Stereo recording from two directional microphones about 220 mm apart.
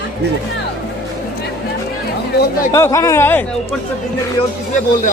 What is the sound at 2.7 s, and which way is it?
Speech, 15° left (ahead or behind).